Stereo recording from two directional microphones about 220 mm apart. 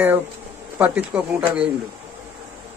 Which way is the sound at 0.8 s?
10° right (ahead or behind).